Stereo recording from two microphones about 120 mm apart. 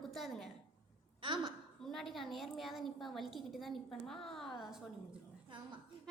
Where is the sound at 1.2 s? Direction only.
45° right (ahead or behind).